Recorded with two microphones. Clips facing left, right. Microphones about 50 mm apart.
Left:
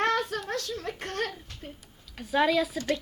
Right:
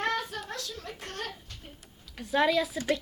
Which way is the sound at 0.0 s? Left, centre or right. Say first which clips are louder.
Left 4 dB; left.